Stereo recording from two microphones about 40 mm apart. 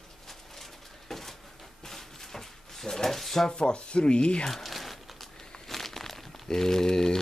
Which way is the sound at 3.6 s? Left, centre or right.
Left.